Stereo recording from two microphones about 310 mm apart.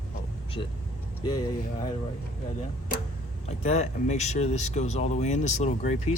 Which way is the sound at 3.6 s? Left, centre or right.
Left.